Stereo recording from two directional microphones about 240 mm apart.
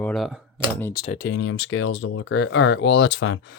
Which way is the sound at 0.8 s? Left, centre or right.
Centre.